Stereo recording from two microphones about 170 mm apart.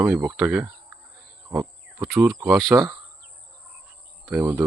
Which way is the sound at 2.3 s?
20° right (ahead or behind).